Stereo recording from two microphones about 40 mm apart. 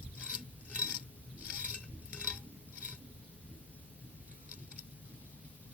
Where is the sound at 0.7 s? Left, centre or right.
Right.